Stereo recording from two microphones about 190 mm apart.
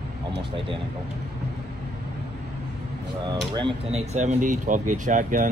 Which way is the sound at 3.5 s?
30° right (ahead or behind).